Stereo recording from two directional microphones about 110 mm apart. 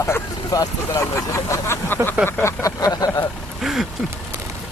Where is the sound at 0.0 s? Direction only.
30° left (ahead or behind).